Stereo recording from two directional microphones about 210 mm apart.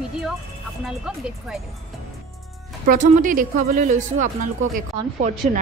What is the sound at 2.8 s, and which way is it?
A woman's voice, 40° right (ahead or behind).